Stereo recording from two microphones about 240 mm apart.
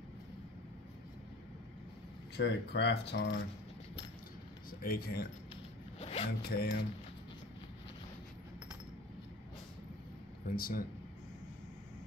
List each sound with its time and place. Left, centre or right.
2.3 s speech: left
4.6 s speech: left
5.9 s zipper: left
6.2 s mechanisms: left
10.5 s mechanisms: left